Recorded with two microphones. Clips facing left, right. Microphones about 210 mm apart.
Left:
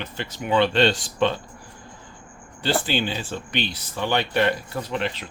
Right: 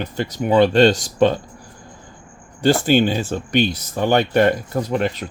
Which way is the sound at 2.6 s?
45° right (ahead or behind).